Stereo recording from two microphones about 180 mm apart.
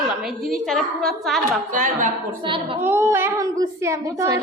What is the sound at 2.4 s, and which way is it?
Speech, 30° right (ahead or behind).